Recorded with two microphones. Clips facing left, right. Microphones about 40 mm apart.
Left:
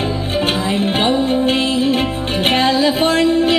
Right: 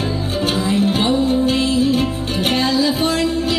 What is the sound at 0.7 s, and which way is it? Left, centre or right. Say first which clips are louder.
Music: even; left.